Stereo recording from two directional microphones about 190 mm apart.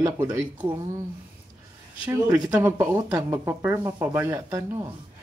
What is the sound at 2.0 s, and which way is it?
Speech, 20° right (ahead or behind).